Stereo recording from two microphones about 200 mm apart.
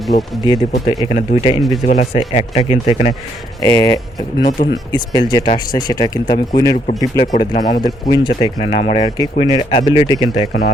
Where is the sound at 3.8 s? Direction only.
20° left (ahead or behind).